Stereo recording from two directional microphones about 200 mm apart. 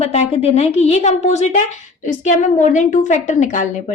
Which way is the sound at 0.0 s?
30° left (ahead or behind).